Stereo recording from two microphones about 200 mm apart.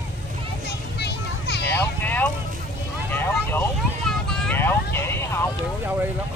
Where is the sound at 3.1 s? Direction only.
10° left (ahead or behind).